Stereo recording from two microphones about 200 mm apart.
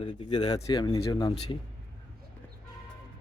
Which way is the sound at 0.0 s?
25° left (ahead or behind).